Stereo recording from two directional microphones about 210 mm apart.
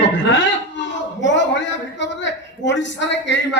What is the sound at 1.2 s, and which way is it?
A man's voice, 60° left (ahead or behind).